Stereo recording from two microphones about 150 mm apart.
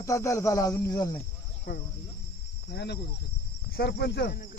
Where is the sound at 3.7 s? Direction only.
90° left.